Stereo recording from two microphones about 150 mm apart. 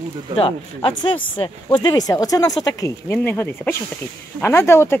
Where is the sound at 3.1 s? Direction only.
10° left (ahead or behind).